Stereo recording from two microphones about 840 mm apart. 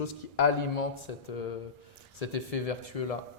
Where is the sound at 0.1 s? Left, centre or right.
Left.